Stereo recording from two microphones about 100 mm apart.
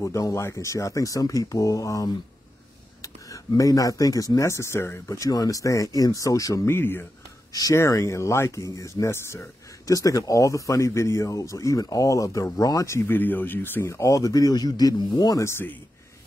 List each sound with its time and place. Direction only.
0.0 s speech: 30° left (ahead or behind)
13.0 s speech: 20° left (ahead or behind); by 15.4 s 45° left (ahead or behind)
15.4 s speech: 20° left (ahead or behind)